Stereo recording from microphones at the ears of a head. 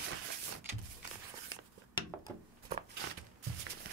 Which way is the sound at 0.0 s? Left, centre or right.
Right.